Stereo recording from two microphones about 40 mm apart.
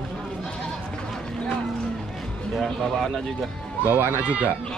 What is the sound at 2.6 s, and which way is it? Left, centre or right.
Speech, centre.